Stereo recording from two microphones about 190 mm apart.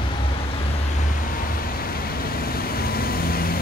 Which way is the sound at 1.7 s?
50° left (ahead or behind).